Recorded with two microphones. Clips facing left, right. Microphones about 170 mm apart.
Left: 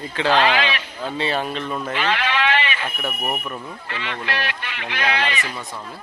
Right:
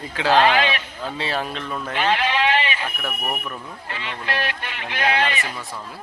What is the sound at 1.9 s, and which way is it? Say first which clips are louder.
Sheep: right 3 dB; 45° right (ahead or behind).